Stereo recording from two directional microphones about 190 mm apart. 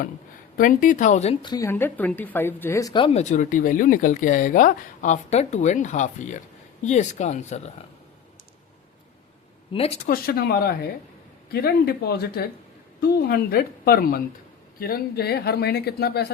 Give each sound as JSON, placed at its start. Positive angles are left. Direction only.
{"t": 0.5, "sound": "speech", "side_deg": 45}
{"t": 9.7, "sound": "speech", "side_deg": 30}
{"t": 10.1, "sound": "a woman's voice", "side_deg": 55}